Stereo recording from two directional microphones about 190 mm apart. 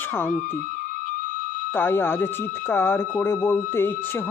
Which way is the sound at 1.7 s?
10° left (ahead or behind).